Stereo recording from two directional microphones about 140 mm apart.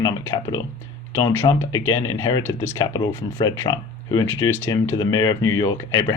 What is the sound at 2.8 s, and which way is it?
Speech, 30° left (ahead or behind).